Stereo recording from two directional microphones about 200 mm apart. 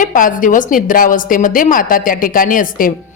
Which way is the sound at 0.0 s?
40° left (ahead or behind).